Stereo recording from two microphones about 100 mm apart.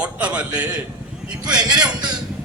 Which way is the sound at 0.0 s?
10° right (ahead or behind).